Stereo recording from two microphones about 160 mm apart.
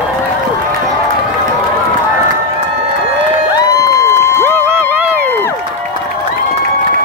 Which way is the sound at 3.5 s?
20° left (ahead or behind).